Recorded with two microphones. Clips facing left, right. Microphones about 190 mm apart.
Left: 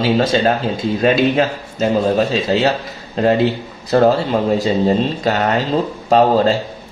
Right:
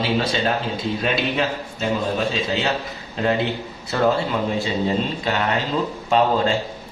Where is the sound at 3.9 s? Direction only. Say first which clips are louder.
Left 7 dB; 35° left (ahead or behind).